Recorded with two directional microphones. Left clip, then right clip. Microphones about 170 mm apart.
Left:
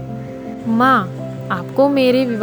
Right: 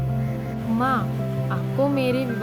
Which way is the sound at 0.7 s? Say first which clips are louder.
Left 10 dB; 45° left (ahead or behind).